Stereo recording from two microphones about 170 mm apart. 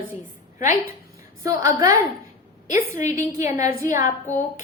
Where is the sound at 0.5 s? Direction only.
50° left (ahead or behind).